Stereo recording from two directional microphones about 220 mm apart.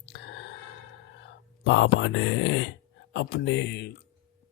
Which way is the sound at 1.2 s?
55° left (ahead or behind).